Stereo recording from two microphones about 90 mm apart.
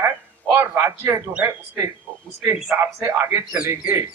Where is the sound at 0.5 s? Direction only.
30° right (ahead or behind).